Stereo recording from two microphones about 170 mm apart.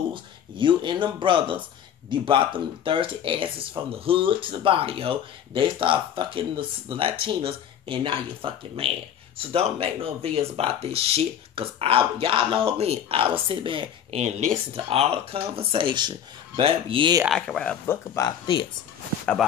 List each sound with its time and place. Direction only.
0.1 s speech: 30° right (ahead or behind)
17.3 s speech: 5° left (ahead or behind)
18.1 s speech: 25° left (ahead or behind)